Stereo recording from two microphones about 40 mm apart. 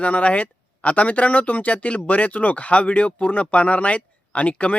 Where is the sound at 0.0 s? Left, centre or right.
Left.